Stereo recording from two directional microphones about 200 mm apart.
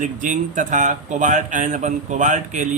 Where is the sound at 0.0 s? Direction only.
40° right (ahead or behind).